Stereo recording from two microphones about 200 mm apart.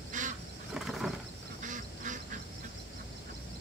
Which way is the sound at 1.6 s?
40° right (ahead or behind).